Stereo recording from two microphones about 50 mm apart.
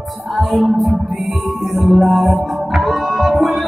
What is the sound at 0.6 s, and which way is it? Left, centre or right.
Music, centre.